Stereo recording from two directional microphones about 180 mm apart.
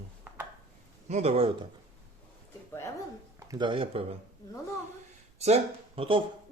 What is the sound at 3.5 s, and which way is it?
Speech, 25° right (ahead or behind).